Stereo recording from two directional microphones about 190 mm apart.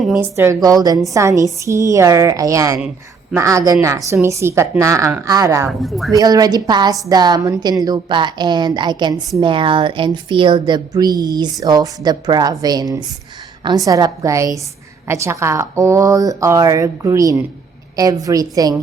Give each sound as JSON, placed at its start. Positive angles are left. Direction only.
{"t": 0.0, "sound": "a woman's voice", "side_deg": 0}
{"t": 0.3, "sound": "a woman's voice", "side_deg": -15}
{"t": 5.8, "sound": "speech", "side_deg": 0}
{"t": 6.1, "sound": "a woman's voice", "side_deg": -20}